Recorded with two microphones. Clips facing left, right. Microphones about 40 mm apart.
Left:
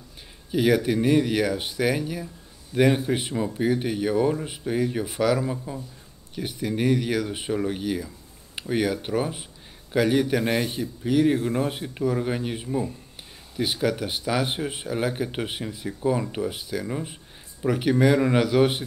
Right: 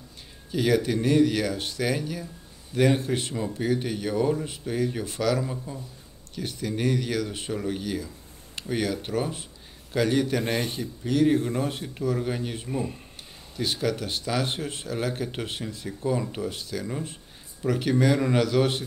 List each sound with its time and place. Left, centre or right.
0.5 s speech: centre
10.4 s a man's voice: left
10.7 s speech: centre
11.3 s a man's voice: left
11.6 s speech: centre